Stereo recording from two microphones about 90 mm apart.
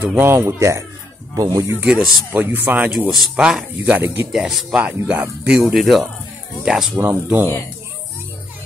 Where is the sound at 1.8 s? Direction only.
5° right (ahead or behind).